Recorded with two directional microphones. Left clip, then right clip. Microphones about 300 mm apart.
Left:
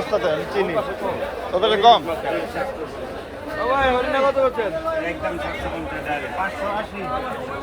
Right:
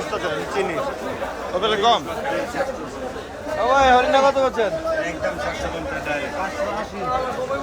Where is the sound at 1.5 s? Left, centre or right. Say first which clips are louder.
Left 4 dB; centre.